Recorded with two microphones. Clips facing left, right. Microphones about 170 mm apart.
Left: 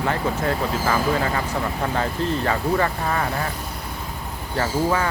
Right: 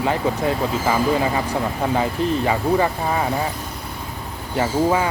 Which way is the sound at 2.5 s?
15° right (ahead or behind).